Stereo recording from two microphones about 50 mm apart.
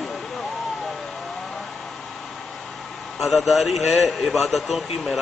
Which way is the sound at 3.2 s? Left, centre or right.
Centre.